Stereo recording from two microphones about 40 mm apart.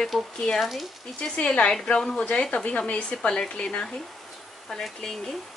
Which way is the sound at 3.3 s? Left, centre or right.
Centre.